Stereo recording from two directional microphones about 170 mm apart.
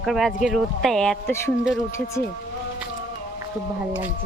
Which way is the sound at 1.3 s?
15° left (ahead or behind).